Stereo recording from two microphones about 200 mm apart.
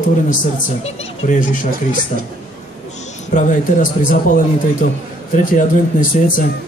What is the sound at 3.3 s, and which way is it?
A man's voice, 40° left (ahead or behind).